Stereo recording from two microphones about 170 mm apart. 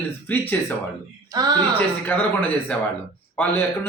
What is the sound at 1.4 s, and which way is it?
Speech, 20° right (ahead or behind).